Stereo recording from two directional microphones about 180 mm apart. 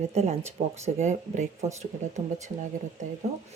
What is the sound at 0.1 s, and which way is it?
Speech, 35° right (ahead or behind).